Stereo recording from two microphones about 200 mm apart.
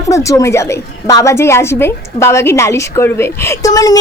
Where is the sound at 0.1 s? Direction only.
15° left (ahead or behind).